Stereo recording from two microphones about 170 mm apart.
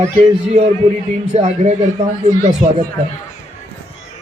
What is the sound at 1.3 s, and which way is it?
Speech, 40° right (ahead or behind).